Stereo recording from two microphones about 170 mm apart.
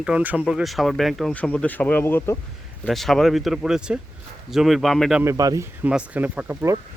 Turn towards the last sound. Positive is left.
turn(degrees=-15)  # may be behind; listen again after turning